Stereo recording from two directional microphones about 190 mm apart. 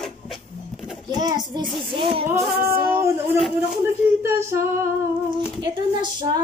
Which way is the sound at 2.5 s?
55° right (ahead or behind).